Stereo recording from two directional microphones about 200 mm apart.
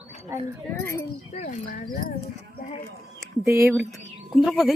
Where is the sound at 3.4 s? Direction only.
10° right (ahead or behind).